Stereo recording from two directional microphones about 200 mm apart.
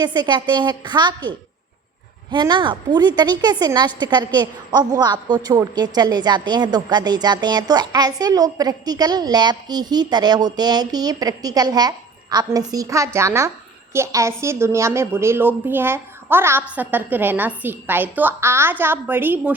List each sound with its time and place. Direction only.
0.0 s a woman's voice: 20° right (ahead or behind)